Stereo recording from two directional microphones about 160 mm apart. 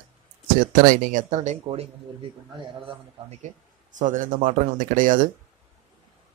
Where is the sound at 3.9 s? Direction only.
50° right (ahead or behind).